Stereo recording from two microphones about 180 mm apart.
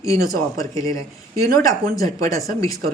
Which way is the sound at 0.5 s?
20° left (ahead or behind).